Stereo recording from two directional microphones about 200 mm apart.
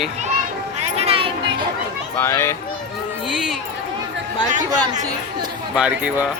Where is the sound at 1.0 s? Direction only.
30° right (ahead or behind).